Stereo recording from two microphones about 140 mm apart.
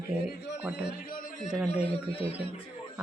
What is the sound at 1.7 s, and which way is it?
Speech, 45° left (ahead or behind).